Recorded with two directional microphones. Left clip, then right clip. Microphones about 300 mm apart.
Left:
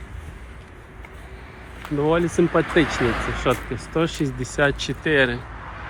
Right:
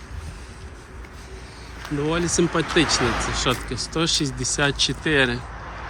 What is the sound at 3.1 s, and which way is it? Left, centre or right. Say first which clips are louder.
Speech: right 1 dB; right.